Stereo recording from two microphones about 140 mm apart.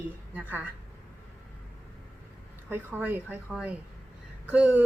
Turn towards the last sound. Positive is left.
turn(degrees=-10)  # may be behind; listen again after turning